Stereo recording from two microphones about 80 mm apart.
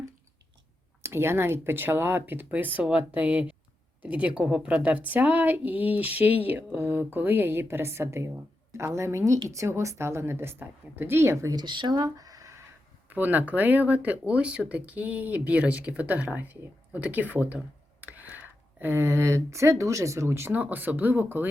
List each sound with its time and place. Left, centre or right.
1.0 s a woman's voice: right
11.5 s speech: right
12.0 s a sound: right
13.1 s speech: right